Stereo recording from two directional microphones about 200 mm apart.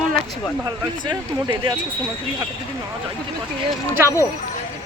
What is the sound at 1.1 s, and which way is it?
Speech, 20° right (ahead or behind).